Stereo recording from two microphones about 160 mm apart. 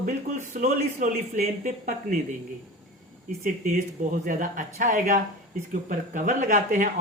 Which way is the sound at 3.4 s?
55° right (ahead or behind).